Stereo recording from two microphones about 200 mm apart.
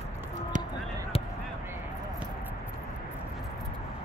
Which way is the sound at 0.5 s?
40° right (ahead or behind).